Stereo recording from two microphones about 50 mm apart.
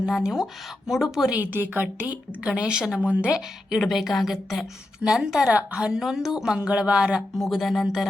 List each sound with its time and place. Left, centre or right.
0.2 s a woman's voice: centre
1.4 s speech: right
2.4 s speech: right
3.8 s speech: centre
5.0 s a woman's voice: centre
5.5 s speech: right
5.9 s a woman's voice: centre
6.6 s speech: right
7.2 s speech: centre